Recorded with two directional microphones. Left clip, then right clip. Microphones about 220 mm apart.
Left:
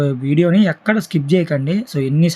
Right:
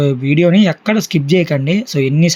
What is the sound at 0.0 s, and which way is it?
Speech, 5° right (ahead or behind).